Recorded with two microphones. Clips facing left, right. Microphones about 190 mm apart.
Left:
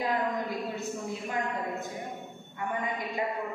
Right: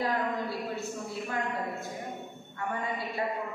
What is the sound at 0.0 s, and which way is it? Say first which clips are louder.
Speech: left 1 dB; 15° left (ahead or behind).